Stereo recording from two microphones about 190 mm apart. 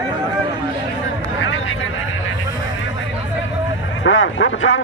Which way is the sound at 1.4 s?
90° left.